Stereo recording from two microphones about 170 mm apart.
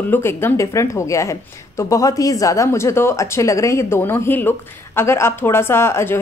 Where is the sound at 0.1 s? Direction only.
15° left (ahead or behind).